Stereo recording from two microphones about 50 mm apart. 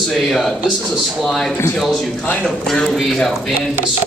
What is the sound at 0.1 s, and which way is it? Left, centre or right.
Speech, centre.